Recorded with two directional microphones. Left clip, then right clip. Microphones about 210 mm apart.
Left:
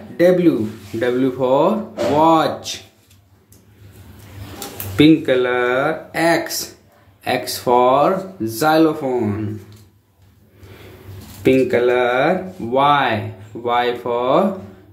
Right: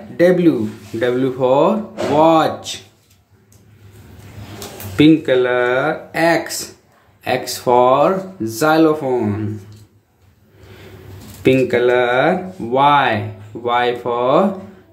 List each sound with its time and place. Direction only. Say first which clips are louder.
0.2 s speech: right 1 dB; 10° right (ahead or behind)
4.9 s speech: right 1 dB; centre (ahead or behind)
11.4 s speech: right 1 dB; 10° right (ahead or behind)